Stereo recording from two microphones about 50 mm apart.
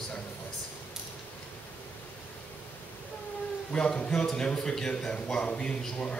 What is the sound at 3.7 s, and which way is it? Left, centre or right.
A man's voice, centre.